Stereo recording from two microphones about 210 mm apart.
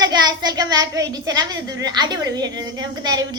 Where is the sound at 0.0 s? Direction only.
20° right (ahead or behind).